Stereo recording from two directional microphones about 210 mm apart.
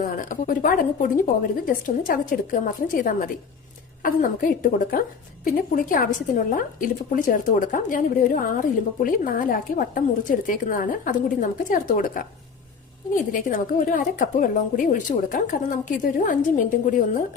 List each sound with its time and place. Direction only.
0.0 s speech: 40° left (ahead or behind)
13.3 s speech: 40° left (ahead or behind)